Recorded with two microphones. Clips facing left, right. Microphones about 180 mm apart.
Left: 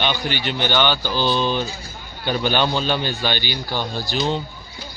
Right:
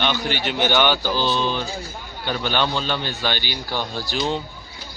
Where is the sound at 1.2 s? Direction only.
10° left (ahead or behind).